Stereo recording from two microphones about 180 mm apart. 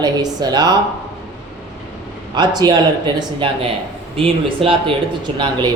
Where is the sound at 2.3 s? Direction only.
25° right (ahead or behind).